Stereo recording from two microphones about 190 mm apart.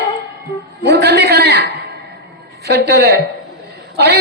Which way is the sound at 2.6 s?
60° right (ahead or behind).